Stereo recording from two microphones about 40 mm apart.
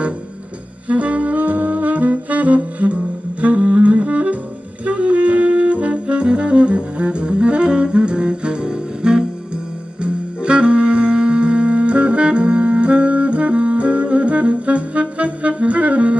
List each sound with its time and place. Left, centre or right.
0.8 s saxophone: right
10.0 s music: right